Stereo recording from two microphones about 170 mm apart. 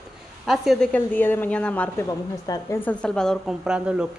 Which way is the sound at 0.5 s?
Centre (ahead or behind).